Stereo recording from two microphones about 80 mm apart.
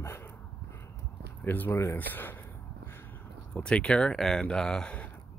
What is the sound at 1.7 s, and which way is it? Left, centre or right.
Speech, left.